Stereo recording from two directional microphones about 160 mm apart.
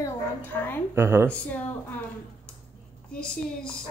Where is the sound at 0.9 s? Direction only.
15° right (ahead or behind).